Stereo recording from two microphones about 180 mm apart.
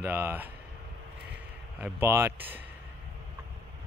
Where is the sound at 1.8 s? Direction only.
10° right (ahead or behind).